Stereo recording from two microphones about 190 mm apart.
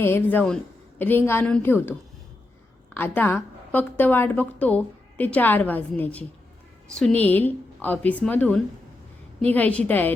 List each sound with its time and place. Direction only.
0.0 s a woman's voice: 10° left (ahead or behind)